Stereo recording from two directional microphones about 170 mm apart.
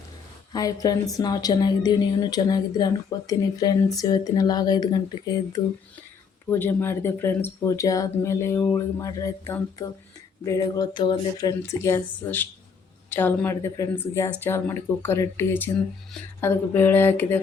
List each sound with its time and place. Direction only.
0.5 s a woman's voice: 20° left (ahead or behind)